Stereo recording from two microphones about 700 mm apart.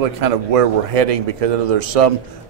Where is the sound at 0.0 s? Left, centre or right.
Right.